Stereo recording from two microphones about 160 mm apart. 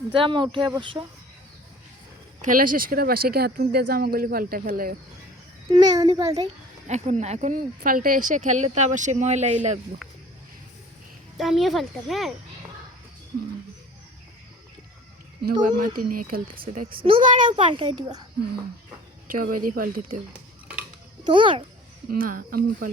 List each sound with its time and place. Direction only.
0.1 s speech: 30° right (ahead or behind)
2.4 s speech: 55° right (ahead or behind)
5.7 s a child's voice: 25° right (ahead or behind)
6.8 s speech: 45° right (ahead or behind)
11.3 s speech: centre (ahead or behind)
15.6 s speech: 65° right (ahead or behind)
17.2 s speech: 55° right (ahead or behind)
17.6 s speech: 30° right (ahead or behind)
19.3 s speech: 60° right (ahead or behind)
21.2 s speech: 30° right (ahead or behind)
22.1 s speech: 60° right (ahead or behind)